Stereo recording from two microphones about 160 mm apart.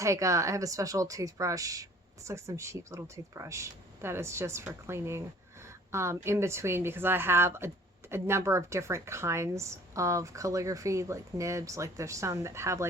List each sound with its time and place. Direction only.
0.0 s a woman's voice: 20° right (ahead or behind)
5.6 s a sound: 15° right (ahead or behind)
6.2 s a woman's voice: 15° right (ahead or behind)